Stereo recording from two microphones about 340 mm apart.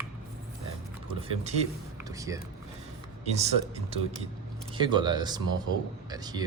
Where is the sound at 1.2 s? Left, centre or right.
Centre.